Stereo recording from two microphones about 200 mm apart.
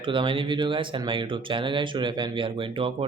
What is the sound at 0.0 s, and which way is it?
Speech, 25° right (ahead or behind).